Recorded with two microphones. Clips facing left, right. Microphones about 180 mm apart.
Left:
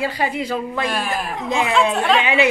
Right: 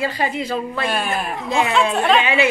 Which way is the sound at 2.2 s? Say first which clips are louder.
Left 1 dB; 15° left (ahead or behind).